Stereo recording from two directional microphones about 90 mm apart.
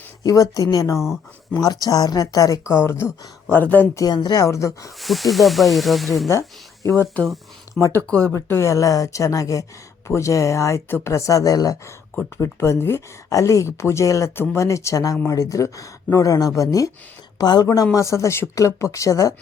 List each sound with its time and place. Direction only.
0.2 s speech: 45° left (ahead or behind)
0.9 s speech: 5° right (ahead or behind)
1.6 s speech: 45° left (ahead or behind); by 3.8 s 20° left (ahead or behind)
3.9 s speech: 50° left (ahead or behind)
4.9 s speech: centre (ahead or behind)
6.8 s speech: 25° left (ahead or behind)
8.3 s speech: 30° left (ahead or behind)
11.1 s speech: 40° left (ahead or behind)
12.1 s speech: 30° left (ahead or behind)
17.3 s speech: 50° left (ahead or behind)
17.9 s speech: 35° left (ahead or behind)